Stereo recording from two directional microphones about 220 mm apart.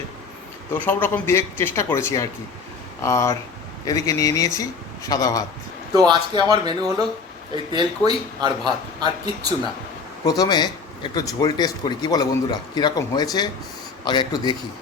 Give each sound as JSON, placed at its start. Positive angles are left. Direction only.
{"t": 0.7, "sound": "speech", "side_deg": 10}
{"t": 6.1, "sound": "speech", "side_deg": -20}
{"t": 10.2, "sound": "speech", "side_deg": 15}